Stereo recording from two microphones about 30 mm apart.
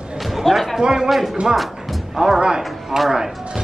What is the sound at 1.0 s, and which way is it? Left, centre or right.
Speech, centre.